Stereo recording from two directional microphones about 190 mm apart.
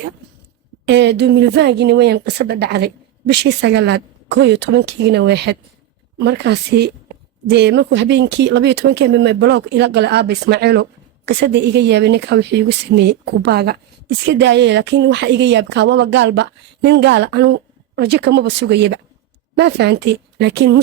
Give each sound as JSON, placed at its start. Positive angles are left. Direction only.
{"t": 0.9, "sound": "speech", "side_deg": -65}